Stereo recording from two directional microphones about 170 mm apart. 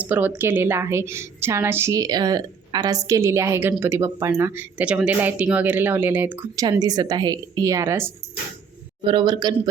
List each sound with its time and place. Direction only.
0.0 s a woman's voice: 10° right (ahead or behind)
6.6 s a woman's voice: 20° right (ahead or behind)
9.0 s a woman's voice: 30° right (ahead or behind)